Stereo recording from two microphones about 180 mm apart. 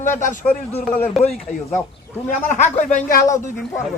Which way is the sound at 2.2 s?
40° left (ahead or behind).